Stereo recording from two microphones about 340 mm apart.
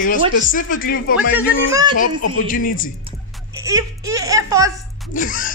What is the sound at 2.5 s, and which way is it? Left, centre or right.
Speech, left.